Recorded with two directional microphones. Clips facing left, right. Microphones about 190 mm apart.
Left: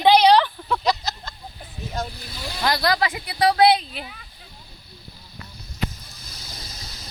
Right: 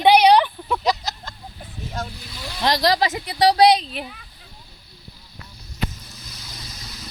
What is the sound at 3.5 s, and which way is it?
Speech, 20° right (ahead or behind).